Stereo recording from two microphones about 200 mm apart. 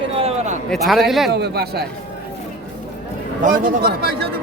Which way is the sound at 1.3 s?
55° right (ahead or behind).